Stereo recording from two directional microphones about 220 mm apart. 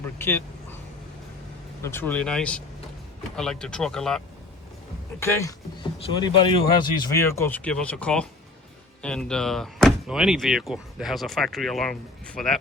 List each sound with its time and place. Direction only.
0.2 s speech: 10° left (ahead or behind)
1.8 s speech: 10° left (ahead or behind)
5.2 s speech: 15° left (ahead or behind)